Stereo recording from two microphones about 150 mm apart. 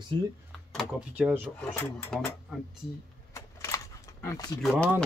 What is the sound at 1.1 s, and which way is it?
Speech, 10° right (ahead or behind).